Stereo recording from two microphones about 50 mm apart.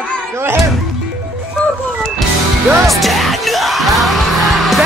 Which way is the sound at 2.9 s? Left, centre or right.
Centre.